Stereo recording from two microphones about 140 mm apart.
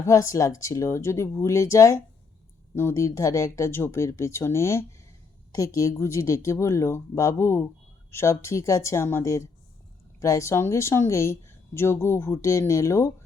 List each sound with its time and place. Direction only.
0.0 s speech: 20° left (ahead or behind)